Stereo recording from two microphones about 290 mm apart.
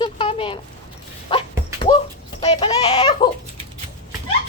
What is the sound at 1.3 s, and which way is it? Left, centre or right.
Dog, centre.